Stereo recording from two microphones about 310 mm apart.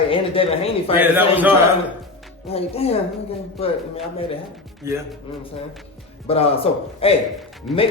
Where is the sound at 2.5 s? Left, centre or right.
Centre.